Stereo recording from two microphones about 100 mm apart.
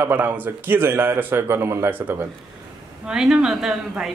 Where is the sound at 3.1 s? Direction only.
10° right (ahead or behind).